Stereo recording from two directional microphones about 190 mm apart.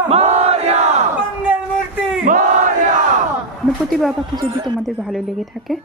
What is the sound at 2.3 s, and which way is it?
Battle cry, 45° right (ahead or behind).